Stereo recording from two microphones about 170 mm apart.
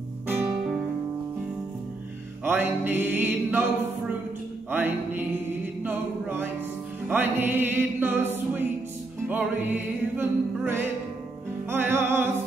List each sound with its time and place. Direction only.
2.4 s music: 10° right (ahead or behind)
4.6 s music: 10° right (ahead or behind)